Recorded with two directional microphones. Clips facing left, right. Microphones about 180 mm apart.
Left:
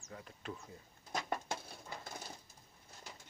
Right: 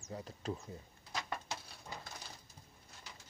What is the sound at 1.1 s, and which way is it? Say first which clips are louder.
Patter: left 3 dB; 50° left (ahead or behind).